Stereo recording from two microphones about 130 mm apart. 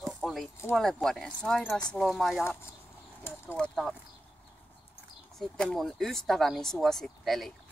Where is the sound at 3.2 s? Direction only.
15° left (ahead or behind).